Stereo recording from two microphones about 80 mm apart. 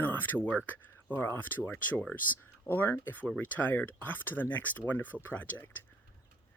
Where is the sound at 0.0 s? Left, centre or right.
Left.